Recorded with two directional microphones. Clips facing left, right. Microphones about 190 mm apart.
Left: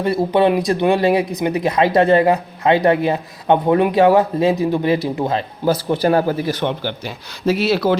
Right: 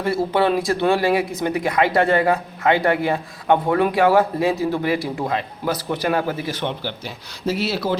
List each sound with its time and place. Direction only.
0.0 s speech: 20° left (ahead or behind); by 6.9 s 50° left (ahead or behind)
7.4 s speech: 75° left (ahead or behind)